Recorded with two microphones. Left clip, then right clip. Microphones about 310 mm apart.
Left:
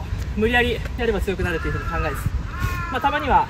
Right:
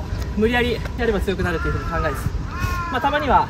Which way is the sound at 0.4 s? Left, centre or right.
Centre.